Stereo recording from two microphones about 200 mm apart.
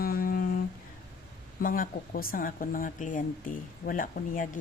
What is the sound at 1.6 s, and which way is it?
Speech, 45° left (ahead or behind).